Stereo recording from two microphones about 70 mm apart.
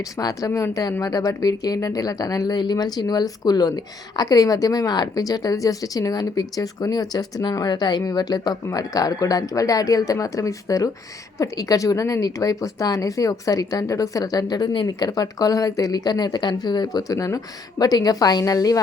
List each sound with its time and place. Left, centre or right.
0.2 s a woman's voice: left
8.7 s a woman's voice: left